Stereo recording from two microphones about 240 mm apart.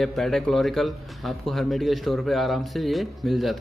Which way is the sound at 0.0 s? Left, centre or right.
Centre.